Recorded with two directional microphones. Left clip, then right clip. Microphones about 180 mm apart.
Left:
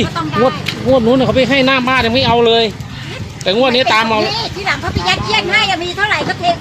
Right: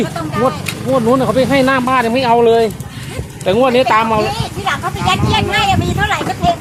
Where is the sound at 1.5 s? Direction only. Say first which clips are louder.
Even; 10° left (ahead or behind).